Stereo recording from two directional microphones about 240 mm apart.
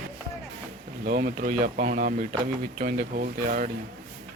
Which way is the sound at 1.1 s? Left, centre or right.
Right.